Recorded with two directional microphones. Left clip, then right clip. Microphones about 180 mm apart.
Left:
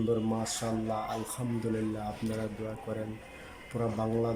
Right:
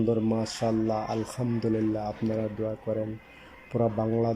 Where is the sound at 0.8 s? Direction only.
15° right (ahead or behind).